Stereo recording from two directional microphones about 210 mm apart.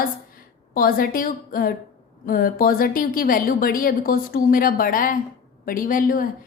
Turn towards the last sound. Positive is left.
turn(degrees=40)  # may be behind; listen again after turning